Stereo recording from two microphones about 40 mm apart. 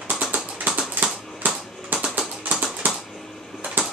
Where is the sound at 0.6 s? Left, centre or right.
Right.